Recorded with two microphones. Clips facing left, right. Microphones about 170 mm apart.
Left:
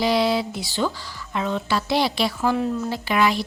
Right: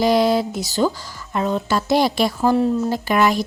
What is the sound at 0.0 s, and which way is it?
Speech, 45° right (ahead or behind).